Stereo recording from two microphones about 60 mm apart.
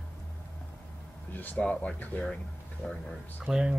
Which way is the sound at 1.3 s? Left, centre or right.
Left.